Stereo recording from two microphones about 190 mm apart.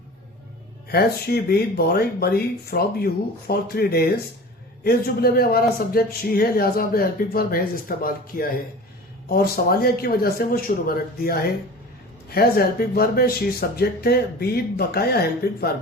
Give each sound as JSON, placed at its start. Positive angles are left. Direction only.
{"t": 0.9, "sound": "a man's voice", "side_deg": 55}